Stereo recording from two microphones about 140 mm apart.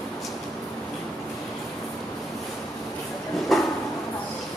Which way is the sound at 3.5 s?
Centre (ahead or behind).